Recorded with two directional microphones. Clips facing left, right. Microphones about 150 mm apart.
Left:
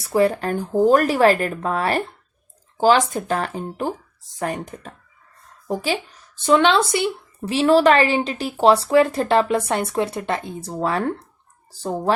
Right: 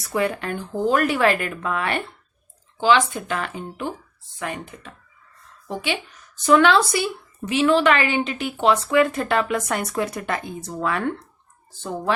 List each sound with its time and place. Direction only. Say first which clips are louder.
0.0 s a woman's voice: left 5 dB; 35° left (ahead or behind)
7.4 s a woman's voice: left 3 dB; 35° left (ahead or behind)